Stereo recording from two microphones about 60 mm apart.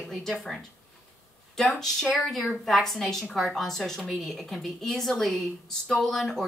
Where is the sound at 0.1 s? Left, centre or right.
Centre.